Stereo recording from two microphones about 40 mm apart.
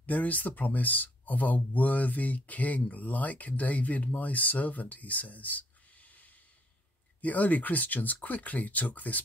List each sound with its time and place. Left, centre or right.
0.0 s speech: left
7.2 s speech: left